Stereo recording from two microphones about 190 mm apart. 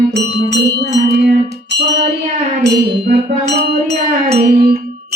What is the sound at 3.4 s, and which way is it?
Music, 65° right (ahead or behind).